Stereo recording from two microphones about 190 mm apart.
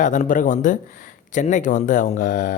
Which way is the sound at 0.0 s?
40° left (ahead or behind).